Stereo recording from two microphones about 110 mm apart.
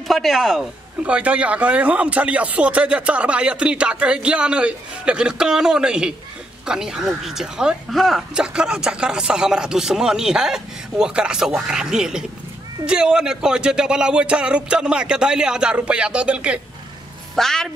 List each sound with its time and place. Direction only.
0.1 s speech: centre (ahead or behind)
17.4 s speech: 5° left (ahead or behind)